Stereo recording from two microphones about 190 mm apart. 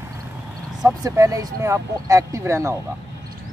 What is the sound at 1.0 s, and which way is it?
Speech, 20° right (ahead or behind).